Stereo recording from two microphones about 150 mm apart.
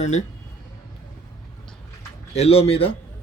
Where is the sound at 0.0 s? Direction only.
50° left (ahead or behind).